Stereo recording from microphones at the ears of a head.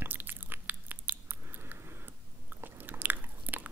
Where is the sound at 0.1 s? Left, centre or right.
Right.